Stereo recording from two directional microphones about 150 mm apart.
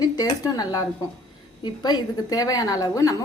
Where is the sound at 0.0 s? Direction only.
25° left (ahead or behind).